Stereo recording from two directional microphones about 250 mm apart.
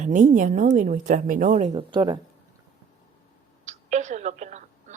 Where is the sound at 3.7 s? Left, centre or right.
Right.